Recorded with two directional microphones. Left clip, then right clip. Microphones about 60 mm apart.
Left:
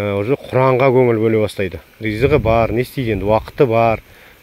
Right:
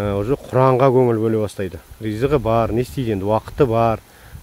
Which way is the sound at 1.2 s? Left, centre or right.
Centre.